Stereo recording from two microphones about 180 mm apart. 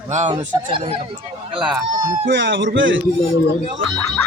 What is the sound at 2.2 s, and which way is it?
Speech, 85° right.